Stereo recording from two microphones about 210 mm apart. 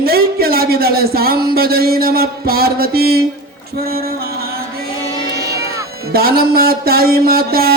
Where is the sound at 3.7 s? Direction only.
45° right (ahead or behind).